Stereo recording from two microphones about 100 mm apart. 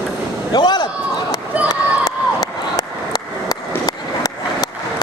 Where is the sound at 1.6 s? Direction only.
40° left (ahead or behind).